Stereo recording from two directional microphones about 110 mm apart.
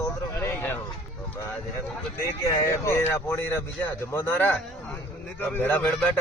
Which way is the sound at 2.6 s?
25° left (ahead or behind).